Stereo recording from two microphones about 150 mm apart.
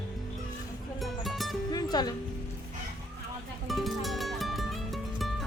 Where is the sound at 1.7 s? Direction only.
25° left (ahead or behind).